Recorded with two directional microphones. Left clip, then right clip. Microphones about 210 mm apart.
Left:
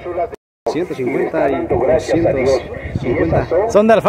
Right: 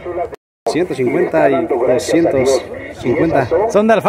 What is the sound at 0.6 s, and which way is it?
A man's voice, 55° right (ahead or behind).